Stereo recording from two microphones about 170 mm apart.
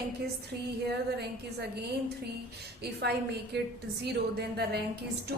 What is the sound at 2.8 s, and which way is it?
A woman's voice, 75° right (ahead or behind).